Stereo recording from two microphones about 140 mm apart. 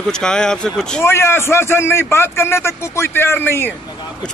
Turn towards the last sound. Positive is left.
turn(degrees=15)  # may be behind; listen again after turning